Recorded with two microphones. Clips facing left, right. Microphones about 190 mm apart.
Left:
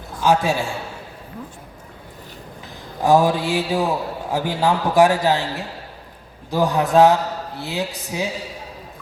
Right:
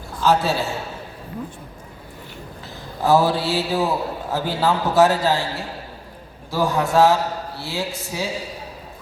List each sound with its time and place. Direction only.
0.2 s a man's voice: 15° left (ahead or behind)
3.0 s a man's voice: 15° left (ahead or behind)